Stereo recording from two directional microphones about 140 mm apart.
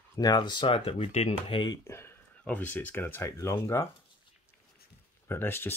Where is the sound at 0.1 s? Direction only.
30° left (ahead or behind); by 1.6 s 45° left (ahead or behind).